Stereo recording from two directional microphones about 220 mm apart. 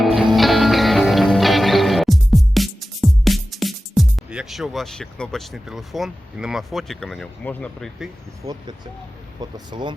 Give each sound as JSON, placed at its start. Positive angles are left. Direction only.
{"t": 0.0, "sound": "music", "side_deg": 0}
{"t": 8.4, "sound": "speech", "side_deg": -15}